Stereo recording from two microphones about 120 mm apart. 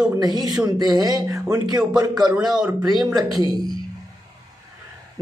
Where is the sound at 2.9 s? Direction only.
Centre (ahead or behind).